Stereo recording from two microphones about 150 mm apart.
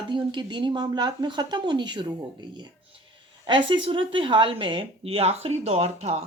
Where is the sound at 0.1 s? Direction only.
30° right (ahead or behind).